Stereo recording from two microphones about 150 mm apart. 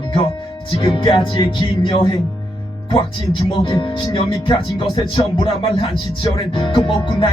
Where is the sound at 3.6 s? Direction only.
35° left (ahead or behind).